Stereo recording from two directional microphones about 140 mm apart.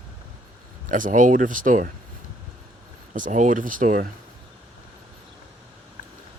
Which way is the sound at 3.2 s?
65° right (ahead or behind).